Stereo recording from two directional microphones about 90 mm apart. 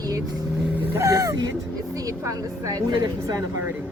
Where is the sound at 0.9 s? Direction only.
35° right (ahead or behind).